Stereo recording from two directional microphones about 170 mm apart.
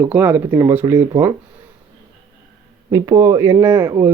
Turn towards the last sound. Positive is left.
turn(degrees=-15)  # may be behind; listen again after turning